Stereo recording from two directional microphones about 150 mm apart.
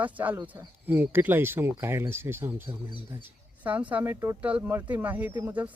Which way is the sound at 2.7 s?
30° right (ahead or behind).